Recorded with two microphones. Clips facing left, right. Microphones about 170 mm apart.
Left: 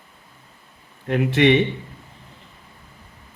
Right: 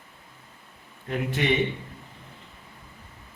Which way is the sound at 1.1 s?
80° left.